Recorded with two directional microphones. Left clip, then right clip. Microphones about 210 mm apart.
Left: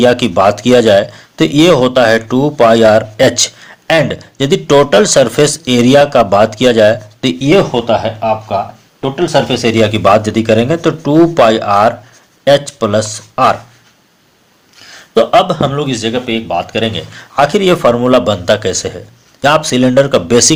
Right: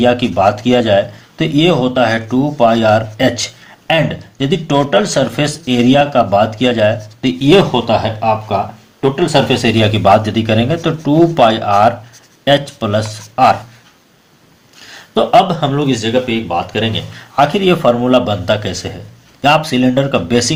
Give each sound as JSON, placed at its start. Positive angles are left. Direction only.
{"t": 0.0, "sound": "a man's voice", "side_deg": 45}
{"t": 7.4, "sound": "speech", "side_deg": 30}
{"t": 14.9, "sound": "a man's voice", "side_deg": 35}